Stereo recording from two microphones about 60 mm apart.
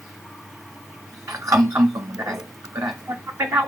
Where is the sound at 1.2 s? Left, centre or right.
Right.